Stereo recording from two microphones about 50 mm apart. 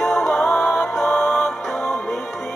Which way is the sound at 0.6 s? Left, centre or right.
Left.